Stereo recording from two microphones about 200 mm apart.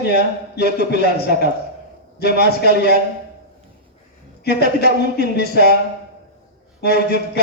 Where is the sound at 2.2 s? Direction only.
55° left (ahead or behind).